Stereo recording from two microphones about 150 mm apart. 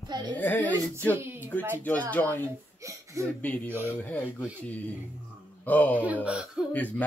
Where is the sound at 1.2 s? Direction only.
15° right (ahead or behind).